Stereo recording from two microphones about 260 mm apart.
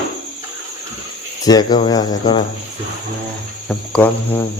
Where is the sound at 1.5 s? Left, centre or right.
Centre.